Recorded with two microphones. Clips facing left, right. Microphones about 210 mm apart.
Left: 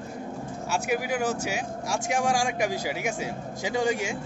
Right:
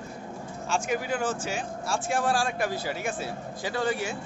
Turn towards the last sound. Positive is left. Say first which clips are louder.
# left 2 dB
turn(degrees=15)  # may be behind; listen again after turning